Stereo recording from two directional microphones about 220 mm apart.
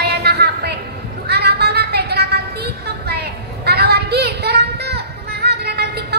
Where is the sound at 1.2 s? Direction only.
45° right (ahead or behind).